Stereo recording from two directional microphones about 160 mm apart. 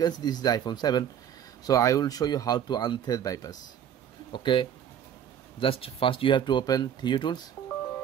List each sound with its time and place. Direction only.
0.0 s speech: 25° left (ahead or behind)